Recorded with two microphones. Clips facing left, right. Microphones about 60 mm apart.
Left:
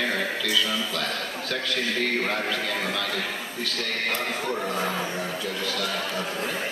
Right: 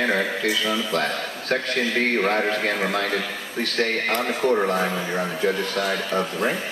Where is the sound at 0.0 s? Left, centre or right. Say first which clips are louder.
Right 5 dB; right.